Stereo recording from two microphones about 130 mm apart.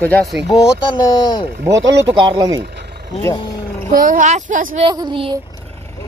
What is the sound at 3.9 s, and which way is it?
Speech, 90° right.